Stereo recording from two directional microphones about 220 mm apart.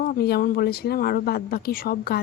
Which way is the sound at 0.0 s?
45° left (ahead or behind).